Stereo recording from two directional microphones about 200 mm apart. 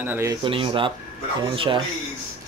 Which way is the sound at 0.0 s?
10° right (ahead or behind).